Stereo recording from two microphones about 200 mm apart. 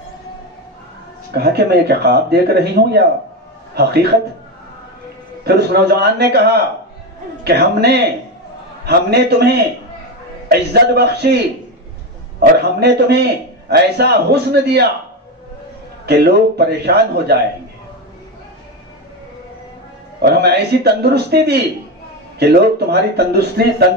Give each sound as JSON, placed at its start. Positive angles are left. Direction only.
{"t": 1.4, "sound": "a man's voice", "side_deg": -50}
{"t": 5.4, "sound": "a man's voice", "side_deg": -55}
{"t": 10.5, "sound": "a man's voice", "side_deg": -50}
{"t": 12.4, "sound": "a man's voice", "side_deg": -55}
{"t": 16.1, "sound": "a man's voice", "side_deg": -55}
{"t": 20.2, "sound": "a man's voice", "side_deg": -55}